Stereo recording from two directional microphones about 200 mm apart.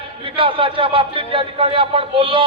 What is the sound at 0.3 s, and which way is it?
A man's voice, 25° right (ahead or behind).